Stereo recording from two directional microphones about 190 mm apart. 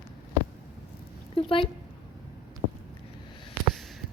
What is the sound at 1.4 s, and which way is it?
Speech, 30° left (ahead or behind).